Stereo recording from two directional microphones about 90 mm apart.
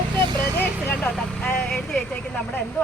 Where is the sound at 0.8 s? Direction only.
15° left (ahead or behind).